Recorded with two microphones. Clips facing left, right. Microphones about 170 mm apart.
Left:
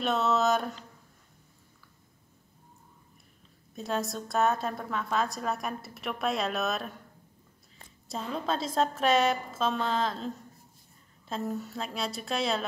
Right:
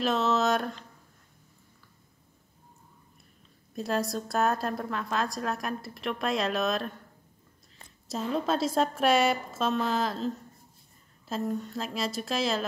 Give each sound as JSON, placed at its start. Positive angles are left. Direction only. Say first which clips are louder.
{"t": 0.0, "sound": "a woman's voice", "louder": "right 1 dB", "side_deg": 0}
{"t": 3.7, "sound": "a woman's voice", "louder": "right 3 dB", "side_deg": 0}
{"t": 8.1, "sound": "a woman's voice", "louder": "right 4 dB", "side_deg": -5}